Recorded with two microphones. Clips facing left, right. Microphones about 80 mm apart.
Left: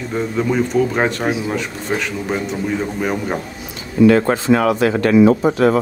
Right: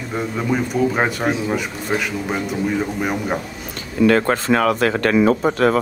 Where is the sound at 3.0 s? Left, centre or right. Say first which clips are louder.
Left 1 dB; centre.